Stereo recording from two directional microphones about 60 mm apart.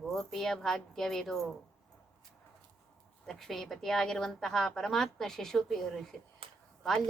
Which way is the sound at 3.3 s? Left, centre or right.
Centre.